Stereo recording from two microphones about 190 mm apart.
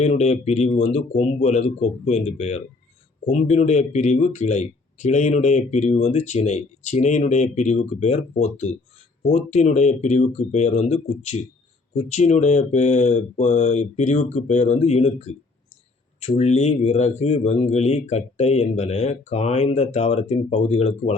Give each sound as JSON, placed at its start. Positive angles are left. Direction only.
{"t": 0.0, "sound": "speech", "side_deg": 35}